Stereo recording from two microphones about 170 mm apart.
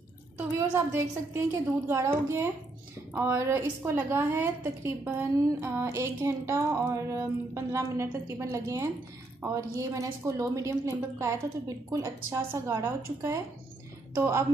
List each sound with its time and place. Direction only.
0.6 s a woman's voice: 15° right (ahead or behind)